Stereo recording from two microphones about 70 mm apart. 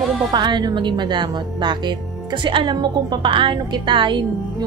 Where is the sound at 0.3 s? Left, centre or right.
Right.